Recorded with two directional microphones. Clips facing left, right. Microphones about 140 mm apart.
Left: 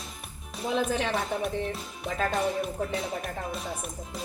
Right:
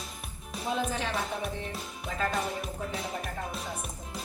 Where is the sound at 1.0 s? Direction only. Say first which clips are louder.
Left 4 dB; 60° left (ahead or behind).